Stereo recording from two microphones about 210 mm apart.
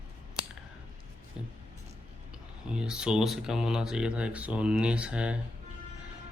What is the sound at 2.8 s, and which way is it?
Speech, 5° right (ahead or behind).